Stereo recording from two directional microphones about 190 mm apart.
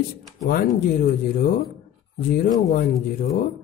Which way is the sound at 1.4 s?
45° left (ahead or behind).